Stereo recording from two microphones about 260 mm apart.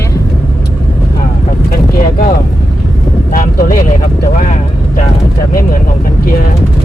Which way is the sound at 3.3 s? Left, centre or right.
Left.